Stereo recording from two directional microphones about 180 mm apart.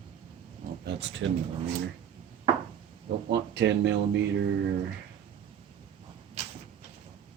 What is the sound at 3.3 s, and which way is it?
Speech, 70° right (ahead or behind).